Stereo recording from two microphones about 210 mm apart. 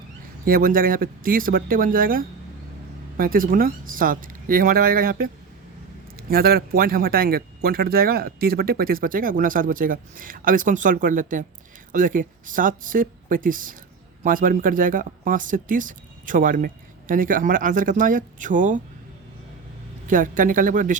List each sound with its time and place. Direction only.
0.4 s speech: 40° right (ahead or behind)
20.1 s speech: 40° right (ahead or behind)